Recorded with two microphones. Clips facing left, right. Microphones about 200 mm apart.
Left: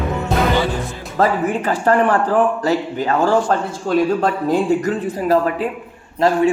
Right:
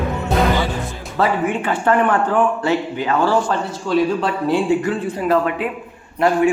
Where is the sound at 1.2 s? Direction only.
40° left (ahead or behind).